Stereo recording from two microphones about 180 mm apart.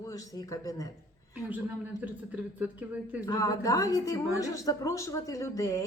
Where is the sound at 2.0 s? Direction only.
10° right (ahead or behind).